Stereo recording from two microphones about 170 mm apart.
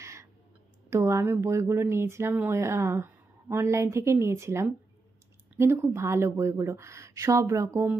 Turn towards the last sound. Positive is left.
turn(degrees=-15)  # may be behind; listen again after turning